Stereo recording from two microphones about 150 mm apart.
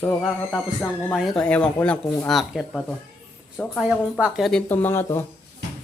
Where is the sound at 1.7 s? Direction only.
10° left (ahead or behind).